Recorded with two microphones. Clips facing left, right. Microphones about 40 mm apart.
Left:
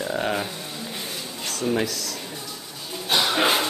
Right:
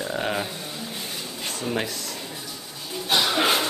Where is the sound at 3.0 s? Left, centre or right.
Centre.